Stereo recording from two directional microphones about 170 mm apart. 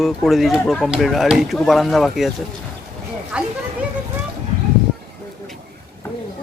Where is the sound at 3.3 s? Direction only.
5° right (ahead or behind).